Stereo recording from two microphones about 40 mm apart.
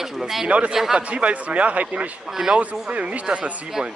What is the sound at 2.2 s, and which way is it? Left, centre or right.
Speech, centre.